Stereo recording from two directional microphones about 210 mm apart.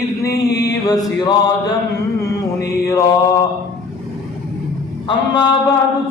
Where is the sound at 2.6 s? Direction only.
15° left (ahead or behind).